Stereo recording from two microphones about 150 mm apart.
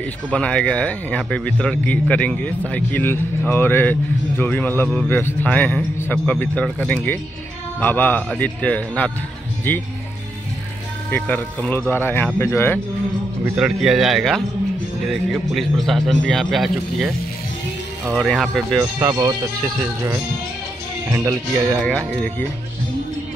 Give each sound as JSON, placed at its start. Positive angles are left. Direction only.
{"t": 0.3, "sound": "a man's voice", "side_deg": 5}
{"t": 11.1, "sound": "a man's voice", "side_deg": 10}
{"t": 13.6, "sound": "speech", "side_deg": -5}
{"t": 18.9, "sound": "speech", "side_deg": -25}
{"t": 21.1, "sound": "speech", "side_deg": -20}
{"t": 21.8, "sound": "speech", "side_deg": 5}